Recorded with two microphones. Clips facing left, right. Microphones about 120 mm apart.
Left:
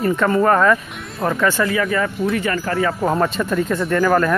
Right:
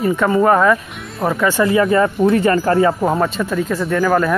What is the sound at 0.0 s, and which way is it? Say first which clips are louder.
Speech: right 2 dB; 5° right (ahead or behind).